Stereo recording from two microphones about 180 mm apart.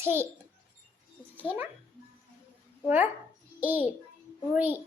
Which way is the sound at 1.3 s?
10° right (ahead or behind).